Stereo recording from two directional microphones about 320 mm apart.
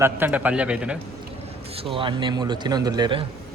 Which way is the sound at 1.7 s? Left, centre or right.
Centre.